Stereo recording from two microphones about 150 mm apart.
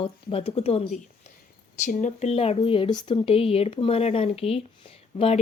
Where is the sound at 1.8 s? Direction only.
55° left (ahead or behind).